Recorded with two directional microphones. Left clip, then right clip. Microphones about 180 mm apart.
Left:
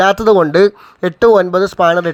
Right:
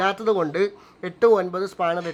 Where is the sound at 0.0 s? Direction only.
35° left (ahead or behind).